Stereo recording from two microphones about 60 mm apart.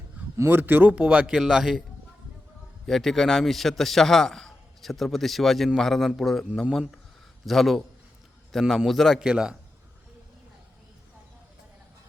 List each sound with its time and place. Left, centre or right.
0.3 s a man's voice: right
0.9 s a man's voice: centre
2.8 s a man's voice: centre
7.4 s a man's voice: centre
9.2 s a man's voice: centre